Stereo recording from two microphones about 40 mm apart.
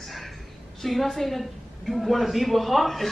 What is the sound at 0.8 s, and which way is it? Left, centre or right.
A woman's voice, centre.